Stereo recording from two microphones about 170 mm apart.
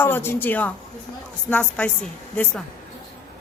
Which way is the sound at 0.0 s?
10° left (ahead or behind).